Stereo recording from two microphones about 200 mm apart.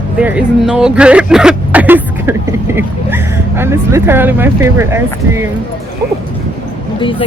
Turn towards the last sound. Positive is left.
turn(degrees=25)  # may be behind; listen again after turning